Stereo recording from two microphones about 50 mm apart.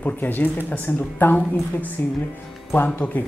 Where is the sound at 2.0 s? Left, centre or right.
Left.